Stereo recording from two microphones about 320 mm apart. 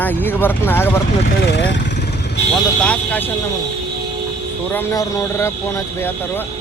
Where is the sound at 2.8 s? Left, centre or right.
Centre.